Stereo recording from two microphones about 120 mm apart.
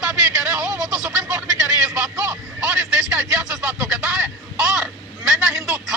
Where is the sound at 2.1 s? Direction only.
25° right (ahead or behind).